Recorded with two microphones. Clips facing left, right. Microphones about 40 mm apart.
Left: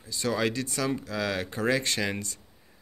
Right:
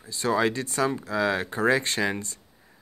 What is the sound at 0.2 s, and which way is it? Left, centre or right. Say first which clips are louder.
Speech: right 4 dB; right.